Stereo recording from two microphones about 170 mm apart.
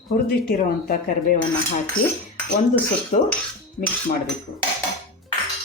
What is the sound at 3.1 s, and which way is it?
Speech, 45° left (ahead or behind).